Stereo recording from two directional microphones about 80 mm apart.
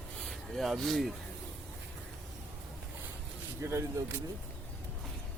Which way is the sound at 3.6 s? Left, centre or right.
Right.